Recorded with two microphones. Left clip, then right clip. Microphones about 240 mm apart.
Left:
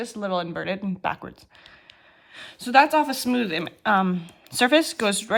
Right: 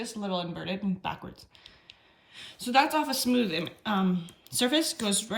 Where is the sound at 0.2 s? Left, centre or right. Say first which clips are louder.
Left 7 dB; centre.